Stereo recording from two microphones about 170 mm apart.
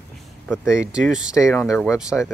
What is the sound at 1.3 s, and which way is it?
Speech, 20° left (ahead or behind).